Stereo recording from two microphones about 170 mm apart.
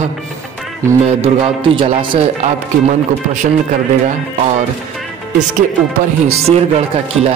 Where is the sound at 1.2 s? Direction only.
35° right (ahead or behind).